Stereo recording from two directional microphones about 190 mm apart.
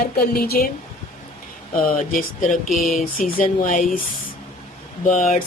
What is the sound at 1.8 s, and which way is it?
Speech, 45° left (ahead or behind).